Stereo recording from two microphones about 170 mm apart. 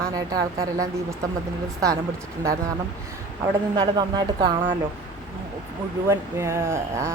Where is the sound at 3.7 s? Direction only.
25° right (ahead or behind).